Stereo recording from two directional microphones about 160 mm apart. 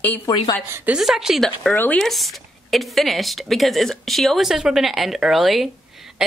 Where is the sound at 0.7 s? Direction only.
15° right (ahead or behind).